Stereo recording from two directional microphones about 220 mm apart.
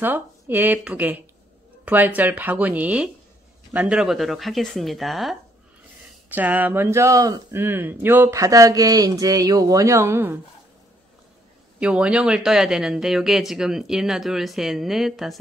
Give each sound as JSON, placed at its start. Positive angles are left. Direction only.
{"t": 0.0, "sound": "speech", "side_deg": -10}
{"t": 11.8, "sound": "speech", "side_deg": -5}